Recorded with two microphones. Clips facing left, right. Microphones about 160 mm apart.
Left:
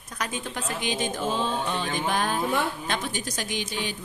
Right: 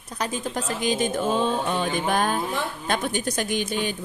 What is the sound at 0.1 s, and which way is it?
A woman's voice, 35° right (ahead or behind).